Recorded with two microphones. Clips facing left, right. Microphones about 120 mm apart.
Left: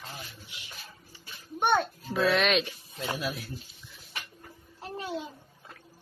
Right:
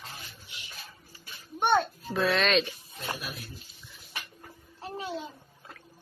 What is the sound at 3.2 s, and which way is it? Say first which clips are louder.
Speech: left 7 dB; 75° left (ahead or behind).